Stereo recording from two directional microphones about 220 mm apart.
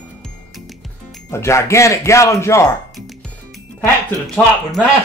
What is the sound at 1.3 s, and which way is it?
Speech, 10° left (ahead or behind).